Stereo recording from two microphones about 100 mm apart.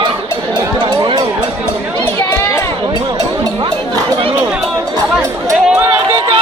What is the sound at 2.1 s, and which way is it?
Chatter, 30° left (ahead or behind).